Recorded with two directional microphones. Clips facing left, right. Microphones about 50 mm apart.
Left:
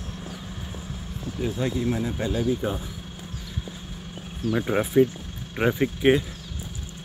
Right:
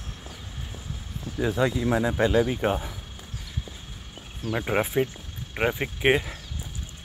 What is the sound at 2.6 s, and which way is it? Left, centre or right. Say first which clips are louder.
Speech: right 3 dB; right.